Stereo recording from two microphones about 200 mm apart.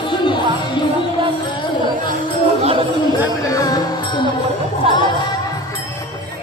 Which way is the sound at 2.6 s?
25° right (ahead or behind).